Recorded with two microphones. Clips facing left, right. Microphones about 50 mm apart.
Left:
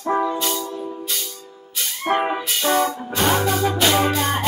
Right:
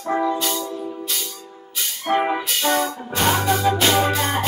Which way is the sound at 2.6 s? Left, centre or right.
Centre.